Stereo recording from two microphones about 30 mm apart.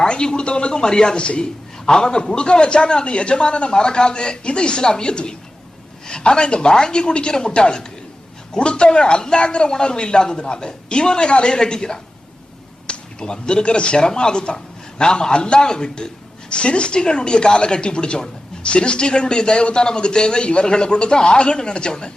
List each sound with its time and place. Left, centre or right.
0.1 s a man's voice: left
16.5 s a man's voice: left